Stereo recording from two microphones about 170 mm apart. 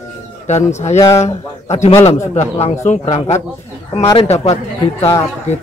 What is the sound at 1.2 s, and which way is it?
Speech, 40° left (ahead or behind).